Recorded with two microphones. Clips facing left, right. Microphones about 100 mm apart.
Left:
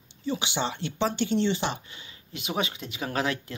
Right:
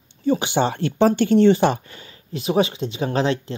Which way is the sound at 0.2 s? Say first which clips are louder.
Right 10 dB; 45° right (ahead or behind).